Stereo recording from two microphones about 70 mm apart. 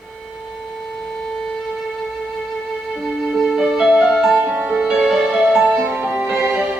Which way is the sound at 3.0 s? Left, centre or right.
Centre.